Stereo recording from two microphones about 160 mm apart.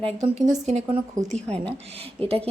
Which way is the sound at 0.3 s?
45° right (ahead or behind).